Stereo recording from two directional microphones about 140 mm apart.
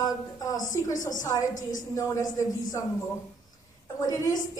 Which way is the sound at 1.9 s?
25° left (ahead or behind).